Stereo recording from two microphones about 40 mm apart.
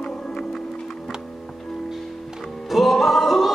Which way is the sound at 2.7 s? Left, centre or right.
Centre.